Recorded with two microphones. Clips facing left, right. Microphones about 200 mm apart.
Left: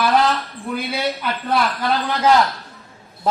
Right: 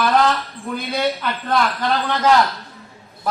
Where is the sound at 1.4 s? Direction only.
10° left (ahead or behind).